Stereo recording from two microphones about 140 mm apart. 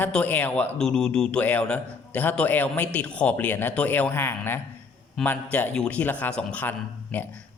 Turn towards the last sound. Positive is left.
turn(degrees=10)  # may be behind; listen again after turning